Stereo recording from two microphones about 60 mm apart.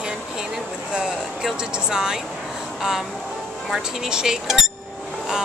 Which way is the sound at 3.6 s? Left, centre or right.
Centre.